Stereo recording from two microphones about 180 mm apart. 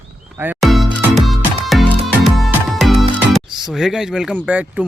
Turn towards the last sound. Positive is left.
turn(degrees=-5)  # may be behind; listen again after turning